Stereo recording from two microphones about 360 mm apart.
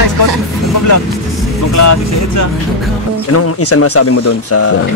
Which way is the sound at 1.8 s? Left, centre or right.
Left.